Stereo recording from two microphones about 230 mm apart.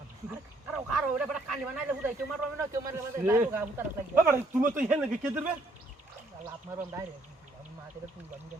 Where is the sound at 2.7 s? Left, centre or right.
Centre.